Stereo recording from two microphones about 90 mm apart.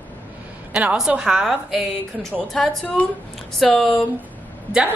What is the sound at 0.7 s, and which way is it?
A woman's voice, 5° right (ahead or behind).